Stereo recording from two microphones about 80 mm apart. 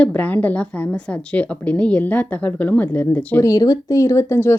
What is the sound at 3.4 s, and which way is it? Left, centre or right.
Speech, left.